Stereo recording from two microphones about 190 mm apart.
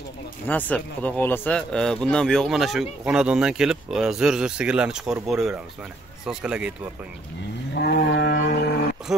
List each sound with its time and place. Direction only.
0.5 s speech: 10° left (ahead or behind)
7.7 s livestock: 60° left (ahead or behind)